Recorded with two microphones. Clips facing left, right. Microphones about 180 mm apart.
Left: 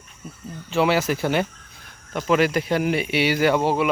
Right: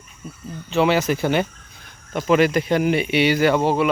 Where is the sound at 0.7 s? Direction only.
5° left (ahead or behind).